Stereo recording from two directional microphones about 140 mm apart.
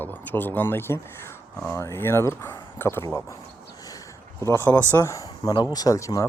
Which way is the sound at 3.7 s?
25° left (ahead or behind).